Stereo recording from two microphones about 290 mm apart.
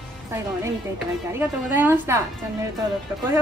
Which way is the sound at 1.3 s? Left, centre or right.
Centre.